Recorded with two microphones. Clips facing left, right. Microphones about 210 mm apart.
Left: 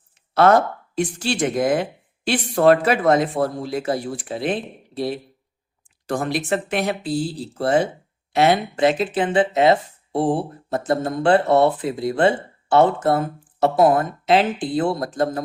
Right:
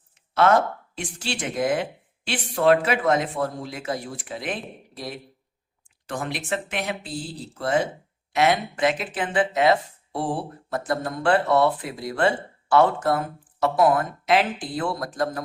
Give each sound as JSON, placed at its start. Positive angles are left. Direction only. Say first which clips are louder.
{"t": 0.1, "sound": "speech", "louder": "left 4 dB", "side_deg": 40}